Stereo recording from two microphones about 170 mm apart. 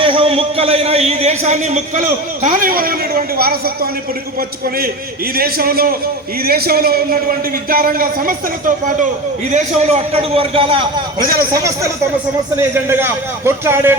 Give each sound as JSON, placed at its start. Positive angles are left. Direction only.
{"t": 0.0, "sound": "a man's voice", "side_deg": -30}
{"t": 9.5, "sound": "a man's voice", "side_deg": -45}
{"t": 11.2, "sound": "a man's voice", "side_deg": -60}
{"t": 11.5, "sound": "a man's voice", "side_deg": -20}